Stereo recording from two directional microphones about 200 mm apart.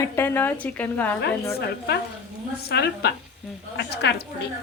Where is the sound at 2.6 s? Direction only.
55° left (ahead or behind).